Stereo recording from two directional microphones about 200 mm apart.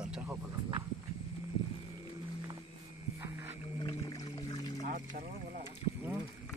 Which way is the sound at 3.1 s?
15° right (ahead or behind).